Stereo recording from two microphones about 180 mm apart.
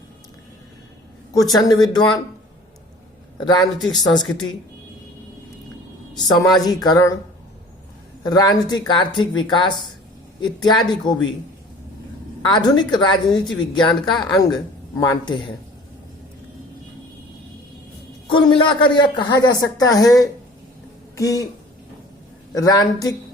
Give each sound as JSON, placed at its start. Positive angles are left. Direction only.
{"t": 1.5, "sound": "speech", "side_deg": 20}
{"t": 3.4, "sound": "speech", "side_deg": 20}
{"t": 6.1, "sound": "speech", "side_deg": 20}
{"t": 8.2, "sound": "speech", "side_deg": 20}
{"t": 12.5, "sound": "speech", "side_deg": 25}
{"t": 18.3, "sound": "speech", "side_deg": 30}
{"t": 22.5, "sound": "speech", "side_deg": 20}